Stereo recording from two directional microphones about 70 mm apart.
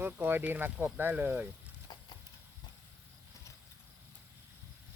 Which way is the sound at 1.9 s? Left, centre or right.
Left.